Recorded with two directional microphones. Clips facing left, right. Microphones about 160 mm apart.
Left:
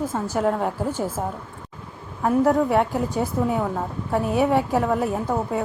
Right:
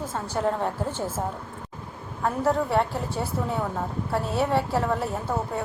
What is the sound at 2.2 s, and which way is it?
A woman's voice, 15° left (ahead or behind).